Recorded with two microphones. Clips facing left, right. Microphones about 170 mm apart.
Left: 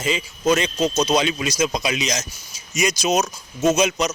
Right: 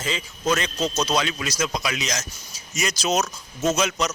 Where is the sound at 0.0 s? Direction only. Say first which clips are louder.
Left 5 dB; 15° left (ahead or behind).